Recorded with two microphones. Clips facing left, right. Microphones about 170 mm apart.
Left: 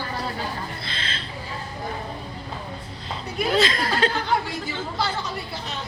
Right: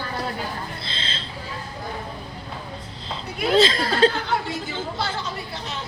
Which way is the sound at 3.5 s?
30° right (ahead or behind).